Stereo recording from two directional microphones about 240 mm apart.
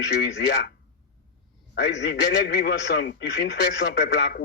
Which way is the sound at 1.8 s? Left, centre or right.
Left.